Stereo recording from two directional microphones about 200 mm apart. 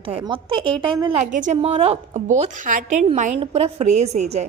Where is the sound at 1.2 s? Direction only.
35° right (ahead or behind).